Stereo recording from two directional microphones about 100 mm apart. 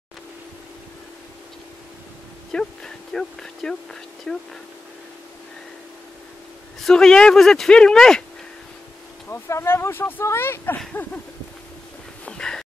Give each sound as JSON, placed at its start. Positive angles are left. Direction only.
{"t": 2.5, "sound": "speech", "side_deg": 5}
{"t": 6.8, "sound": "speech", "side_deg": 5}
{"t": 9.3, "sound": "speech", "side_deg": 25}
{"t": 12.3, "sound": "a sound", "side_deg": 5}